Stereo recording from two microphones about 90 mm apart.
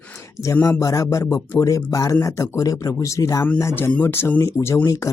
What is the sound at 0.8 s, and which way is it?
Speech, 35° left (ahead or behind).